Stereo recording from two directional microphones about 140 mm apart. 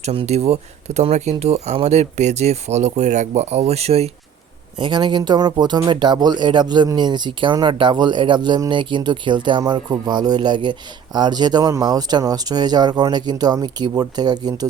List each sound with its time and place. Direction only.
0.0 s speech: 45° right (ahead or behind)
4.8 s speech: 35° right (ahead or behind)